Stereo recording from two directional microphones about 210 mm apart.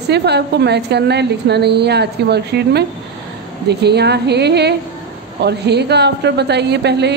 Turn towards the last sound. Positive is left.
turn(degrees=-55)  # may be behind; listen again after turning